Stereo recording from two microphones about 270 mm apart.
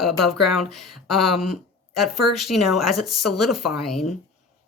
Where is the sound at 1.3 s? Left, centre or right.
Left.